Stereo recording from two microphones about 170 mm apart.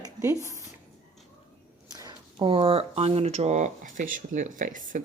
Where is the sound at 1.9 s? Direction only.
25° right (ahead or behind).